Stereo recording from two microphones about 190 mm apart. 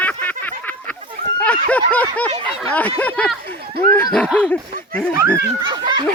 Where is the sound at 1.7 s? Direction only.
5° left (ahead or behind).